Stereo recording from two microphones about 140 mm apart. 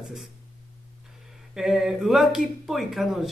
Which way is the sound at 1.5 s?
5° right (ahead or behind).